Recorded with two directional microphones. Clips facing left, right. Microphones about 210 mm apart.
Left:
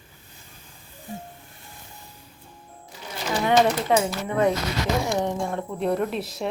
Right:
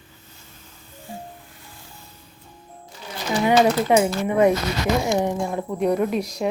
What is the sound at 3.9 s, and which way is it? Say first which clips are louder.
A woman's voice: right 4 dB; 15° right (ahead or behind).